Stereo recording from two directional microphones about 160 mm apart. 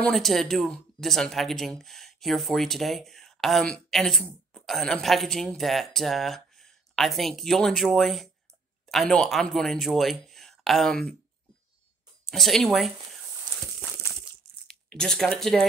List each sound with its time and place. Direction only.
0.0 s speech: centre (ahead or behind)
12.3 s speech: centre (ahead or behind)
13.5 s a sound: 25° right (ahead or behind)
14.7 s speech: 5° left (ahead or behind)